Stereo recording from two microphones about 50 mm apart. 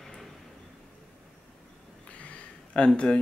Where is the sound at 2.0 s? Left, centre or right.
Left.